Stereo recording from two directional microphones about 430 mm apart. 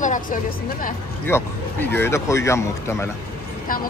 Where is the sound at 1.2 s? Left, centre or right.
Centre.